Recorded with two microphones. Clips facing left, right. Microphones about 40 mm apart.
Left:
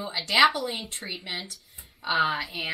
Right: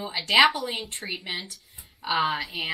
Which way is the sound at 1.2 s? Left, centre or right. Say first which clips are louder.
Right 1 dB; centre.